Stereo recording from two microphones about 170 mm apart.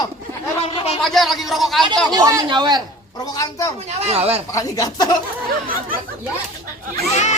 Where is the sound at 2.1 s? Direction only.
20° right (ahead or behind).